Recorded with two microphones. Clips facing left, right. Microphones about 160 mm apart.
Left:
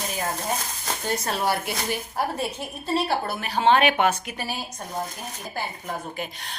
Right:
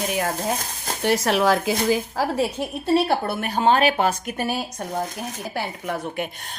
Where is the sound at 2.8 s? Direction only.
60° right (ahead or behind).